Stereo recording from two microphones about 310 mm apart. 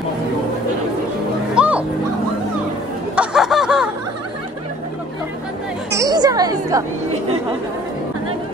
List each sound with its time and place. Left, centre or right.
1.5 s music: centre
3.2 s a sound: centre
5.9 s chatter: centre